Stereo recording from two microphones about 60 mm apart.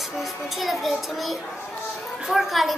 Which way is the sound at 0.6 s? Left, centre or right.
Centre.